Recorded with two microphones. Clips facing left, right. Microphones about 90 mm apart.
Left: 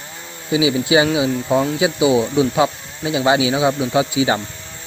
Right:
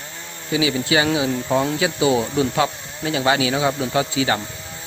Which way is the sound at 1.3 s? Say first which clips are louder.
Left 2 dB; 5° left (ahead or behind).